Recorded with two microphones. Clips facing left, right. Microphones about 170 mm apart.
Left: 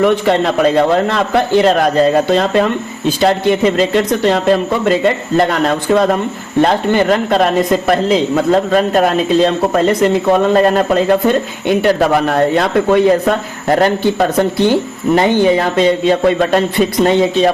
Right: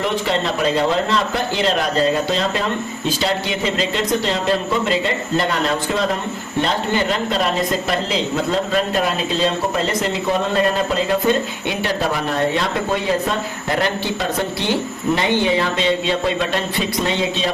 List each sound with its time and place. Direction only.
0.0 s a man's voice: 55° left (ahead or behind)